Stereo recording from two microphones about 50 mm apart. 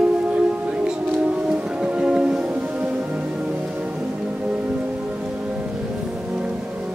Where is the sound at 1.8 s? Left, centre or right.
Right.